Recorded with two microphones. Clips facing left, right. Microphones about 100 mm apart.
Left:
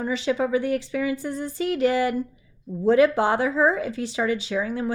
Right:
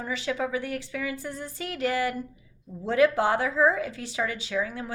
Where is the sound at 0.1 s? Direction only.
25° left (ahead or behind).